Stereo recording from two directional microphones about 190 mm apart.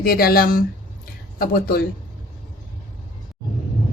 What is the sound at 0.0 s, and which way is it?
A woman's voice, 50° left (ahead or behind).